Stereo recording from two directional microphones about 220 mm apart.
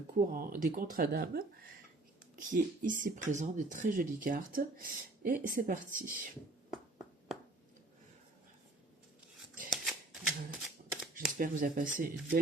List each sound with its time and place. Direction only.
0.2 s speech: 40° right (ahead or behind)
9.6 s shuffling cards: centre (ahead or behind)
11.1 s speech: 35° right (ahead or behind)